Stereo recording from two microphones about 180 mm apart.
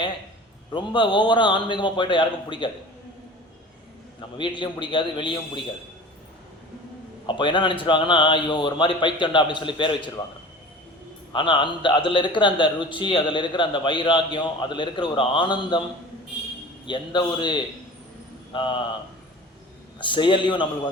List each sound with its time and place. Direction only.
0.7 s a man's voice: 25° left (ahead or behind)
4.2 s a man's voice: 25° left (ahead or behind)
7.3 s a man's voice: 25° left (ahead or behind)
11.3 s a man's voice: 25° left (ahead or behind)
16.8 s a man's voice: 25° left (ahead or behind)
20.0 s a man's voice: 25° left (ahead or behind)